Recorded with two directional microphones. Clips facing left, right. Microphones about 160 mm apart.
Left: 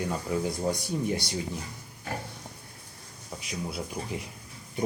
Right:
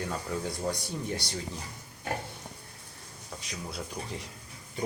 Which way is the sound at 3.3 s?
10° left (ahead or behind).